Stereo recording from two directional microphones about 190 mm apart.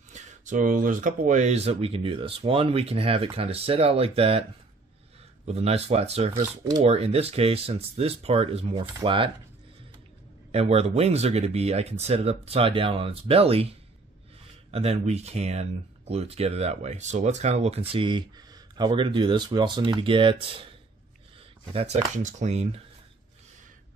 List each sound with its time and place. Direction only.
0.1 s speech: 45° right (ahead or behind)
5.5 s speech: 35° right (ahead or behind)
10.5 s speech: 35° right (ahead or behind)
21.7 s speech: 35° right (ahead or behind)